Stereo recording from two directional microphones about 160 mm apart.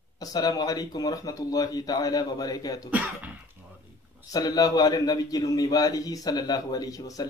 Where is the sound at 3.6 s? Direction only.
10° right (ahead or behind).